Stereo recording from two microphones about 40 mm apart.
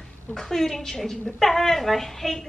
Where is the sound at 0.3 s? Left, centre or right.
Centre.